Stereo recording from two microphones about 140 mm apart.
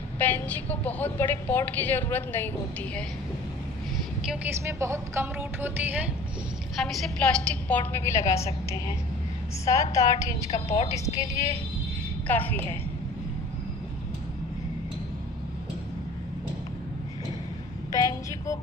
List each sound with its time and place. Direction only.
0.2 s a woman's voice: 10° left (ahead or behind)
4.6 s speech: 20° right (ahead or behind)
6.8 s a woman's voice: 5° left (ahead or behind); by 8.5 s 20° left (ahead or behind)
9.7 s a woman's voice: 25° left (ahead or behind)
12.3 s a woman's voice: 15° left (ahead or behind)
17.9 s a sound: 25° left (ahead or behind)